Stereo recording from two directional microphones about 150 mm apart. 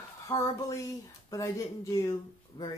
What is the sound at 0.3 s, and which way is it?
Speech, 20° left (ahead or behind).